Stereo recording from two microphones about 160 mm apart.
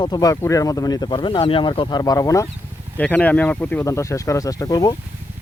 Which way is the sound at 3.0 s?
10° left (ahead or behind).